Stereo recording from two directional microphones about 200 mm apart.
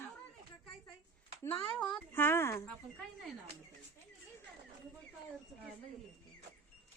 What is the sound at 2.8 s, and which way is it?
Speech, centre (ahead or behind).